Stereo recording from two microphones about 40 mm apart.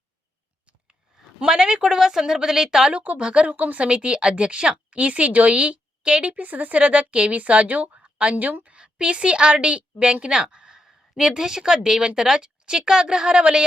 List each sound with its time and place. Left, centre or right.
1.5 s speech: centre
2.9 s a woman's voice: right
3.2 s speech: right
3.4 s a woman's voice: right
3.8 s speech: right
6.3 s a woman's voice: right
7.9 s a sound: right
8.6 s a woman's voice: right
10.8 s speech: centre